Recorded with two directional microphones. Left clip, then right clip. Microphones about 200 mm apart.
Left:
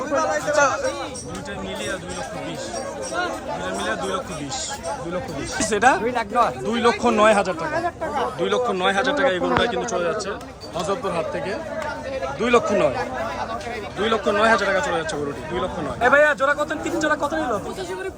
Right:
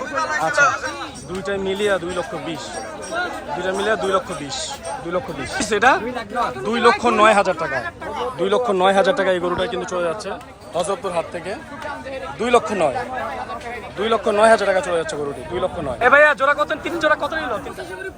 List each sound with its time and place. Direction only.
0.2 s chatter: 35° left (ahead or behind)
1.5 s a man's voice: 10° right (ahead or behind)
3.6 s a man's voice: centre (ahead or behind)
8.4 s speech: 5° right (ahead or behind)
8.7 s a man's voice: 15° right (ahead or behind)
10.8 s a man's voice: 5° left (ahead or behind)
12.4 s speech: 5° left (ahead or behind)
14.0 s a man's voice: 5° right (ahead or behind)
16.0 s a man's voice: 5° left (ahead or behind)